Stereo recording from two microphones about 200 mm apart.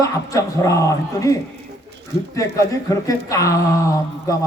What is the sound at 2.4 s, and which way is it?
Speech, 15° left (ahead or behind).